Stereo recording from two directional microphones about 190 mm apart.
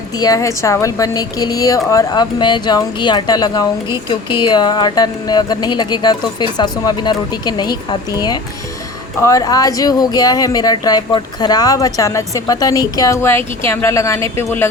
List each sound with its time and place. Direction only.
0.2 s a woman's voice: 20° left (ahead or behind)